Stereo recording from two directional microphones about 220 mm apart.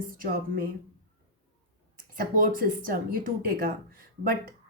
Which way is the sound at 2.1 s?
40° right (ahead or behind).